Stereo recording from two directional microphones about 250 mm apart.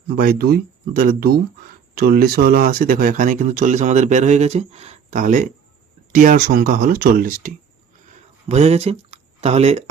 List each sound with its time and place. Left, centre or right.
0.2 s speech: right